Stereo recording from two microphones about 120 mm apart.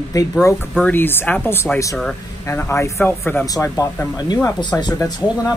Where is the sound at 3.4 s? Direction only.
30° left (ahead or behind).